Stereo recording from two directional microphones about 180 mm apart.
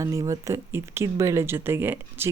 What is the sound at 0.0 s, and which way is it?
Speech, 15° right (ahead or behind).